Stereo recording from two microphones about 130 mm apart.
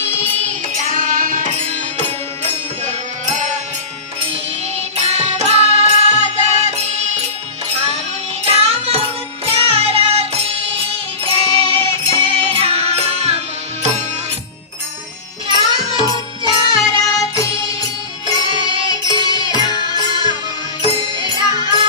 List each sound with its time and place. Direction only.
0.1 s music: 15° left (ahead or behind)
0.7 s music: 85° right; by 2.1 s 60° right (ahead or behind)
4.7 s music: 55° right (ahead or behind)
15.4 s music: 35° right (ahead or behind)
18.4 s music: 40° right (ahead or behind)
19.2 s music: 30° left (ahead or behind)
20.8 s music: 40° right (ahead or behind)